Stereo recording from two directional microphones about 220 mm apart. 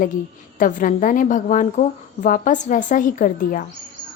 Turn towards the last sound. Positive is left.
turn(degrees=35)  # may be behind; listen again after turning